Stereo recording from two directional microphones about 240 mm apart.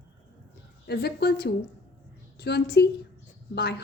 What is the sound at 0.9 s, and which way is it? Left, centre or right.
A woman's voice, left.